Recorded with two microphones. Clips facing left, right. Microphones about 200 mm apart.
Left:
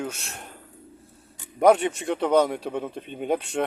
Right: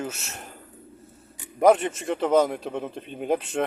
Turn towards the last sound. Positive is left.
turn(degrees=0)  # may be behind; listen again after turning